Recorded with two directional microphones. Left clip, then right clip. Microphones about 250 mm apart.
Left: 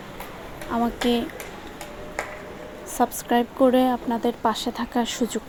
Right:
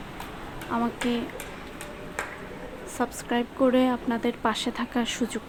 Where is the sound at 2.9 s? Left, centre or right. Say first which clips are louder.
Left 6 dB; centre.